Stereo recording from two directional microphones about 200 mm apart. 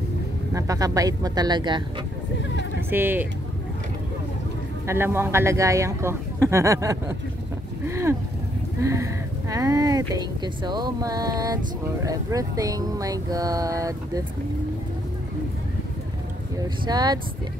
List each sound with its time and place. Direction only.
0.6 s speech: 15° right (ahead or behind)
2.9 s speech: 10° right (ahead or behind)
4.8 s speech: 10° right (ahead or behind)
16.5 s speech: 20° right (ahead or behind)